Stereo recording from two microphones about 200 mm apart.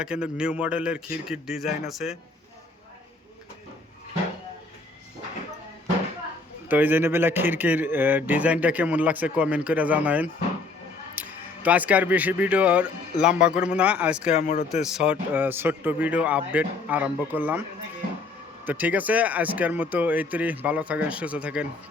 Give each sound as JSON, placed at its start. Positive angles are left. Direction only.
{"t": 0.0, "sound": "a man's voice", "side_deg": -5}
{"t": 6.7, "sound": "speech", "side_deg": -10}
{"t": 14.3, "sound": "a man's voice", "side_deg": 35}
{"t": 14.8, "sound": "speech", "side_deg": -5}
{"t": 18.6, "sound": "speech", "side_deg": -10}